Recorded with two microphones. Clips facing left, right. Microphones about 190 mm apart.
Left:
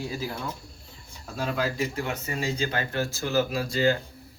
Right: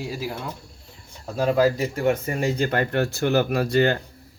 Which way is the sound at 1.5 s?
40° right (ahead or behind).